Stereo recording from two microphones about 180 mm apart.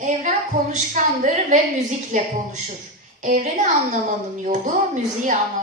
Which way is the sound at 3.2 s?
45° right (ahead or behind).